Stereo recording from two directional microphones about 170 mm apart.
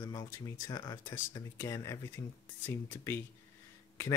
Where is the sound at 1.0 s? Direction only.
15° left (ahead or behind).